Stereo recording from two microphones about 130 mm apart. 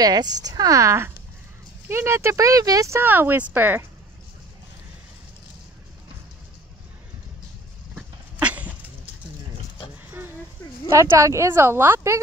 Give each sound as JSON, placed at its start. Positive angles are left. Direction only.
{"t": 0.0, "sound": "speech", "side_deg": -30}
{"t": 7.9, "sound": "dog", "side_deg": -10}
{"t": 10.9, "sound": "speech", "side_deg": -25}